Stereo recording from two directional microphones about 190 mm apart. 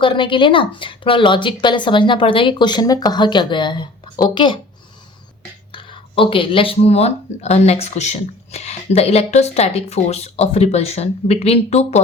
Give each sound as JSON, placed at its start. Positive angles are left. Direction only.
{"t": 0.0, "sound": "speech", "side_deg": 25}
{"t": 5.7, "sound": "speech", "side_deg": 25}